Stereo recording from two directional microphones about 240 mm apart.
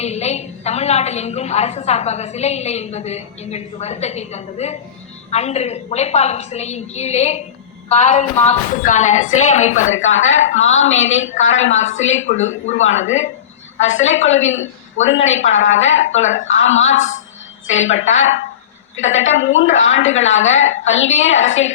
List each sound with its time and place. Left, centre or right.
0.0 s a woman's voice: left
9.9 s a woman's voice: left
15.5 s speech: left
15.8 s a woman's voice: left
16.2 s speech: left
16.5 s a woman's voice: left